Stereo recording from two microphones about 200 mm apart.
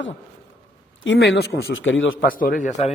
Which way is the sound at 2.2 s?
45° left (ahead or behind).